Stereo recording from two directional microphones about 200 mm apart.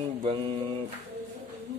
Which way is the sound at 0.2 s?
30° right (ahead or behind).